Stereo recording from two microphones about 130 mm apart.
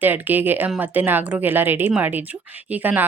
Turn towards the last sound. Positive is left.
turn(degrees=-15)  # may be behind; listen again after turning